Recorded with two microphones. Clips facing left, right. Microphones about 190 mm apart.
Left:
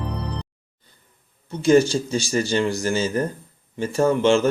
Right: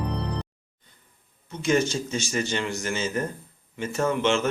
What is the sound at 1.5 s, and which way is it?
Speech, 35° left (ahead or behind).